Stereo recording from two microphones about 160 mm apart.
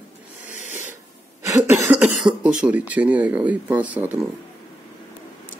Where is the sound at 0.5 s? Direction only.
50° left (ahead or behind).